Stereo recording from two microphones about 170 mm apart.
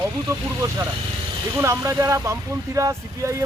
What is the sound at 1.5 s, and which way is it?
Speech, 15° right (ahead or behind).